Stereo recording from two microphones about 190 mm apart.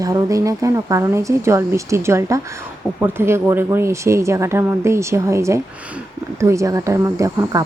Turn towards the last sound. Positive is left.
turn(degrees=-15)  # may be behind; listen again after turning